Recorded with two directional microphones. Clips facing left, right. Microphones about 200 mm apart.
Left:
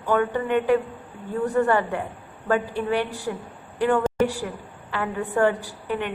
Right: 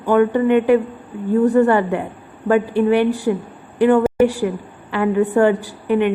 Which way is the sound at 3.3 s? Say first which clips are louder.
Right 10 dB; 20° right (ahead or behind).